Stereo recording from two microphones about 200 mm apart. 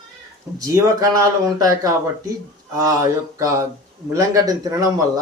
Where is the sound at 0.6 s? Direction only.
15° right (ahead or behind).